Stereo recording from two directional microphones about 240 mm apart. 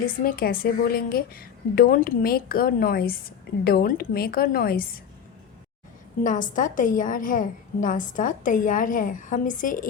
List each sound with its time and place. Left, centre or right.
0.3 s a woman's voice: left
6.2 s a woman's voice: left